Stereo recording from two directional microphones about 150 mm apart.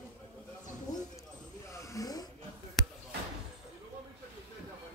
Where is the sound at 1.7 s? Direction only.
20° left (ahead or behind).